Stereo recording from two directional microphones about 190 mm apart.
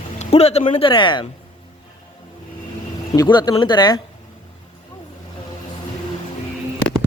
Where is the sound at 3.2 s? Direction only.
20° left (ahead or behind).